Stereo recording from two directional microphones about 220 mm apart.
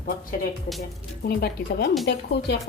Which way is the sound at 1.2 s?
50° left (ahead or behind).